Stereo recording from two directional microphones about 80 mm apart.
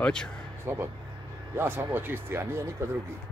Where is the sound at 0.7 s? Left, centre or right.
Right.